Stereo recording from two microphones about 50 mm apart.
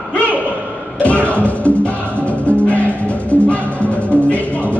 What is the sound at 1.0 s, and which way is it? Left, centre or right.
Music, left.